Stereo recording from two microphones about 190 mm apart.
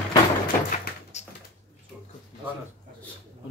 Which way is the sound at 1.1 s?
35° left (ahead or behind).